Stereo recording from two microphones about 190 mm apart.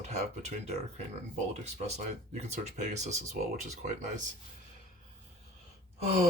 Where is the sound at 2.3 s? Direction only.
35° right (ahead or behind).